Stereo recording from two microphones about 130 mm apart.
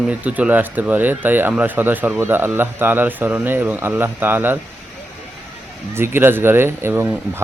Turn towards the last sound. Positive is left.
turn(degrees=-15)  # may be behind; listen again after turning